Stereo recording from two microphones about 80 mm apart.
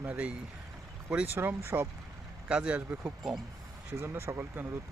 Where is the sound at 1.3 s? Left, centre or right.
Right.